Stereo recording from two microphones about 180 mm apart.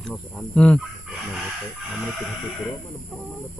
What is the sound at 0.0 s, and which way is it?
Speech, 5° left (ahead or behind).